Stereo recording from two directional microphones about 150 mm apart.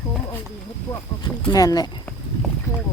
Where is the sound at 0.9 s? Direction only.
25° left (ahead or behind).